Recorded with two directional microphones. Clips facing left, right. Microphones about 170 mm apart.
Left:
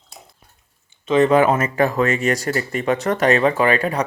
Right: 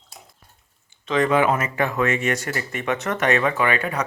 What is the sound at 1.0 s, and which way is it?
Speech, 25° left (ahead or behind).